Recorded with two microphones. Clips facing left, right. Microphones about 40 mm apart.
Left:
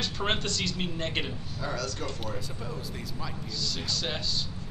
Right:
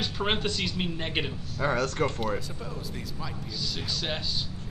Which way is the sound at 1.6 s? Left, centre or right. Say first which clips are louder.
Right 8 dB; right.